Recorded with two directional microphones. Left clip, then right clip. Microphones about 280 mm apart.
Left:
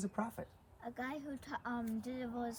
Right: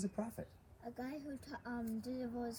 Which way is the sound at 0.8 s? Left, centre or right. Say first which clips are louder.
Left 4 dB; left.